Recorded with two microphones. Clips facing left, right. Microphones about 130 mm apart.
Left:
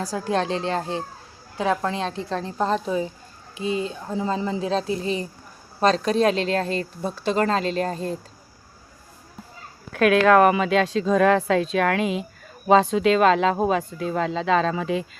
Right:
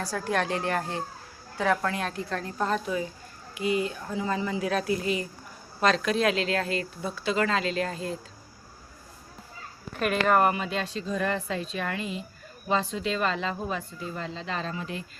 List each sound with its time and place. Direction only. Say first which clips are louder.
0.0 s speech: left 4 dB; 20° left (ahead or behind); by 8.1 s 40° left (ahead or behind)
9.9 s speech: left 8 dB; 90° left